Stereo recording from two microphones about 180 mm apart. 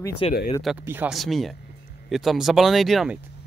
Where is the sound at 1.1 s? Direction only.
Centre (ahead or behind).